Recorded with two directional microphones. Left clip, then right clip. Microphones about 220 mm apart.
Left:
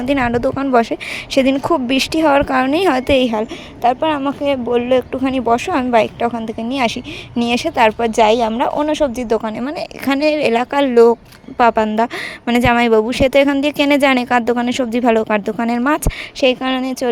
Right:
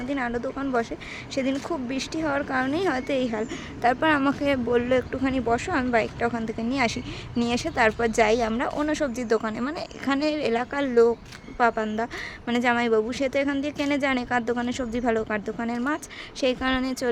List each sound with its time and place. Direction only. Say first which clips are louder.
0.1 s speech: left 13 dB; 35° left (ahead or behind)
3.8 s speech: left 6 dB; 10° left (ahead or behind)